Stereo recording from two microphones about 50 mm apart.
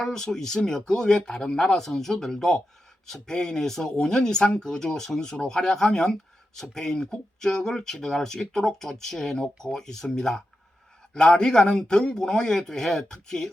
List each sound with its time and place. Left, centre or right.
0.0 s speech: centre